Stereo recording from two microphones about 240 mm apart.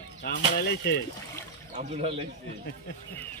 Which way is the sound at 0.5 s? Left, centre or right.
Left.